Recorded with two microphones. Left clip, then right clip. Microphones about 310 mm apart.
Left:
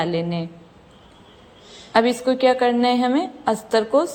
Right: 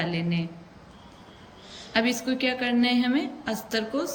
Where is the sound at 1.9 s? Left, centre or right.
Centre.